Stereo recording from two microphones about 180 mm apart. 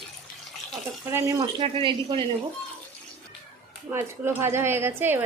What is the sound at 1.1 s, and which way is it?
Speech, 20° right (ahead or behind).